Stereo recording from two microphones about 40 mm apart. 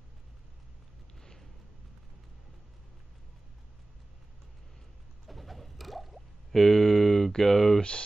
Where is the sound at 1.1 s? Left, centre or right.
Centre.